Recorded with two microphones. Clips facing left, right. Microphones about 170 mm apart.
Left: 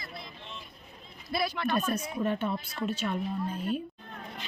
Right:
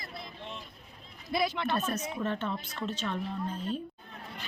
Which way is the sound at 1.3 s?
20° right (ahead or behind).